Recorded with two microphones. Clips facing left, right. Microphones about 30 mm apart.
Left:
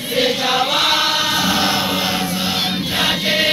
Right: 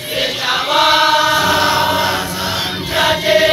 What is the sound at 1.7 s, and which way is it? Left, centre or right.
Choir, right.